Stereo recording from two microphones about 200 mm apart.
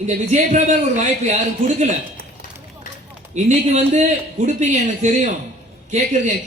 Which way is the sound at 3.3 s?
35° right (ahead or behind).